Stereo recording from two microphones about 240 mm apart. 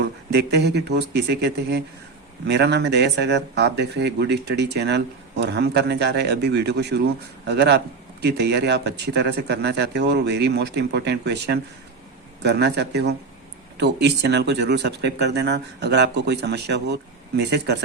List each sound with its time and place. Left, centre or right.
0.0 s speech: right